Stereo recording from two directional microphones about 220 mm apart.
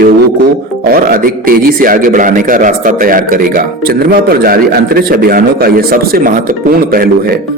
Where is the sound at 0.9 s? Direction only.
40° right (ahead or behind).